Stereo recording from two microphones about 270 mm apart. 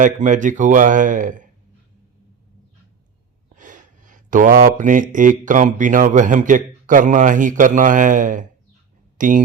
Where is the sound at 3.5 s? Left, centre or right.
Right.